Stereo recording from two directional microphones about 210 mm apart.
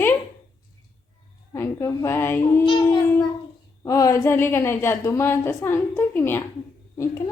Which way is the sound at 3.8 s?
15° left (ahead or behind).